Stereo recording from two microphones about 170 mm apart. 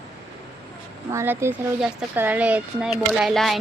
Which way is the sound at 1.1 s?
15° right (ahead or behind).